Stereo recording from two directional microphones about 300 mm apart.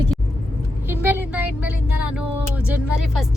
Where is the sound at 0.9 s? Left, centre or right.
Centre.